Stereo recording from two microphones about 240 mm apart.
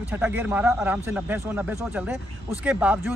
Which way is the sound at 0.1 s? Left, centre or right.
Centre.